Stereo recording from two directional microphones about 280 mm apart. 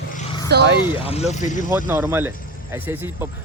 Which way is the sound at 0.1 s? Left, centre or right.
Left.